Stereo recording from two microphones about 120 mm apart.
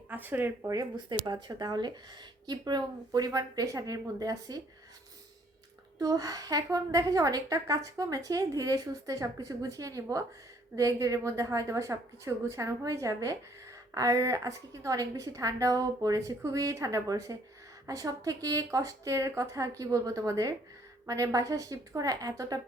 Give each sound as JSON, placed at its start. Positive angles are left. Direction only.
{"t": 0.1, "sound": "speech", "side_deg": -15}
{"t": 0.7, "sound": "a woman's voice", "side_deg": -30}
{"t": 6.0, "sound": "a woman's voice", "side_deg": -30}